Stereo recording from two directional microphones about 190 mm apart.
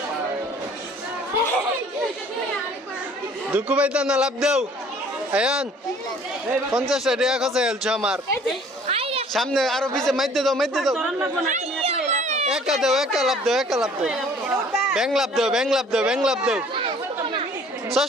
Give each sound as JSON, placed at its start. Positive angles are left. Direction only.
{"t": 3.5, "sound": "speech", "side_deg": -5}
{"t": 6.7, "sound": "speech", "side_deg": 0}
{"t": 8.9, "sound": "a sound", "side_deg": -30}
{"t": 9.3, "sound": "speech", "side_deg": 0}
{"t": 11.4, "sound": "chatter", "side_deg": -35}
{"t": 12.5, "sound": "speech", "side_deg": -5}
{"t": 18.0, "sound": "speech", "side_deg": -5}